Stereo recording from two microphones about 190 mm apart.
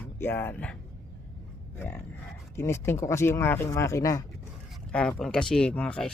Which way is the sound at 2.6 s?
15° left (ahead or behind).